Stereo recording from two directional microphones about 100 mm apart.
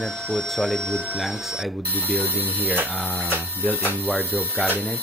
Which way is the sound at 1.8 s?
20° left (ahead or behind).